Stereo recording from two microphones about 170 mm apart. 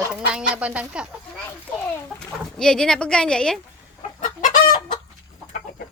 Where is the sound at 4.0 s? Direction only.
50° left (ahead or behind).